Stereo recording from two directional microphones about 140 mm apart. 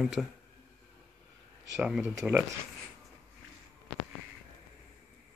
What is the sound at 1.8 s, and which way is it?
Speech, 5° right (ahead or behind).